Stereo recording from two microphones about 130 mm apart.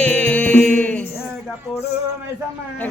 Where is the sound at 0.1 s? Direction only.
10° left (ahead or behind).